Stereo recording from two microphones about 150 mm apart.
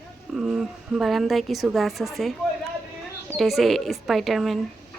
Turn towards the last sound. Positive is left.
turn(degrees=0)  # may be behind; listen again after turning